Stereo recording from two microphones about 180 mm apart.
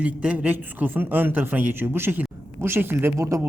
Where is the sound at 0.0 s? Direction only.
5° right (ahead or behind).